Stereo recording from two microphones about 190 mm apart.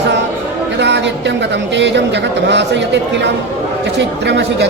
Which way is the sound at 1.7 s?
70° right (ahead or behind).